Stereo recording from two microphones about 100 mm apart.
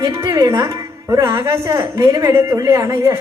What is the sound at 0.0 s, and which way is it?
Speech, 35° right (ahead or behind).